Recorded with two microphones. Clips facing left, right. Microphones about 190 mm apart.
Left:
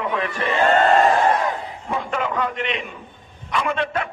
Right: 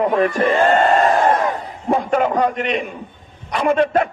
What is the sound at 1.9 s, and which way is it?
Speech, 45° right (ahead or behind).